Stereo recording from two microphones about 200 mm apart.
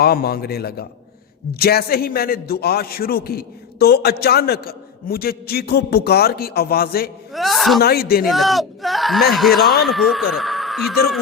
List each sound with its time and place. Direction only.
0.0 s a man's voice: 50° left (ahead or behind)
7.3 s speech: centre (ahead or behind)
7.8 s a man's voice: 50° left (ahead or behind)
8.3 s speech: centre (ahead or behind)
10.3 s a sound: centre (ahead or behind)